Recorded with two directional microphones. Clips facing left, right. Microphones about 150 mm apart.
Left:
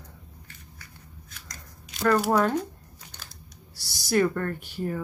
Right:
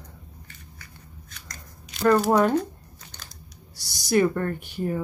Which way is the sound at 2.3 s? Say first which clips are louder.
Right 3 dB; 15° right (ahead or behind).